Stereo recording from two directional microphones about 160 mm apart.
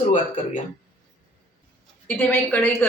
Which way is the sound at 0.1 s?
55° left (ahead or behind).